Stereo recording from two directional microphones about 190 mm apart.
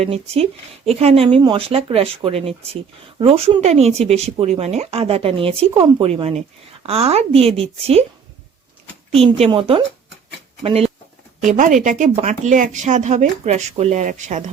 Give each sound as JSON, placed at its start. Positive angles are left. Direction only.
{"t": 0.0, "sound": "speech", "side_deg": -30}
{"t": 9.1, "sound": "speech", "side_deg": -30}
{"t": 11.4, "sound": "speech", "side_deg": -40}